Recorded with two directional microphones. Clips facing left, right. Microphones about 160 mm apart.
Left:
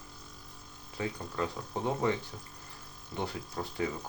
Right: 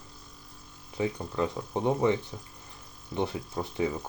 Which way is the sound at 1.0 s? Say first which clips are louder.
Right 5 dB; 20° right (ahead or behind).